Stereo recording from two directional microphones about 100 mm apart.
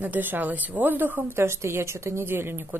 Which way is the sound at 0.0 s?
20° right (ahead or behind).